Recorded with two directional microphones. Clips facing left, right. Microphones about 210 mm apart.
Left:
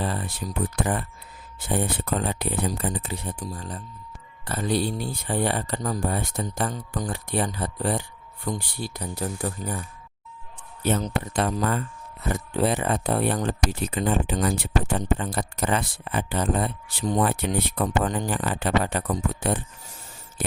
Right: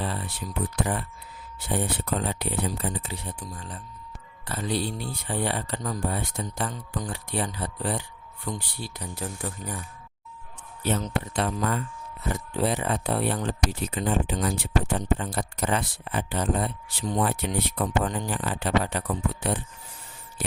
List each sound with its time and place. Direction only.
0.0 s speech: 45° left (ahead or behind)
3.4 s speech: 35° left (ahead or behind)
11.0 s speech: 45° left (ahead or behind)
12.3 s speech: 55° left (ahead or behind)
14.0 s speech: 60° left (ahead or behind)
14.9 s speech: 80° left
17.1 s speech: 45° left (ahead or behind)